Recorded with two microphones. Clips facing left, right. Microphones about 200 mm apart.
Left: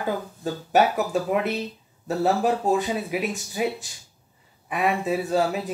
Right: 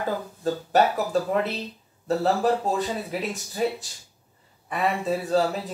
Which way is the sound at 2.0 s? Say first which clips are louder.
Even; 10° left (ahead or behind).